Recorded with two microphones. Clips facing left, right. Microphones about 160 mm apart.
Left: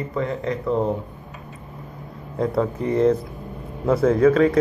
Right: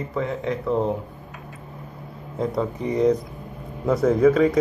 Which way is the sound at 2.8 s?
15° right (ahead or behind).